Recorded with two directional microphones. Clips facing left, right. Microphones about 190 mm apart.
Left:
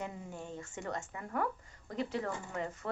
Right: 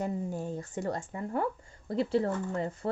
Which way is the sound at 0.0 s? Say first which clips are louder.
Right 9 dB; 40° right (ahead or behind).